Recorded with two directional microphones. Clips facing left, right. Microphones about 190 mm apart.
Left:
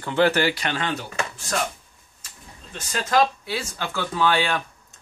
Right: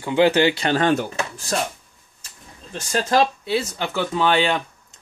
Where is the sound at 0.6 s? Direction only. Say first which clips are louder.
Right 8 dB; 45° right (ahead or behind).